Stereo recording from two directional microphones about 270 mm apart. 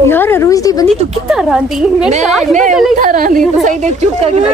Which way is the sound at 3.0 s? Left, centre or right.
Right.